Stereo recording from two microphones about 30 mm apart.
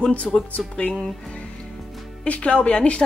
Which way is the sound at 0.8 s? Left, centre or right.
Left.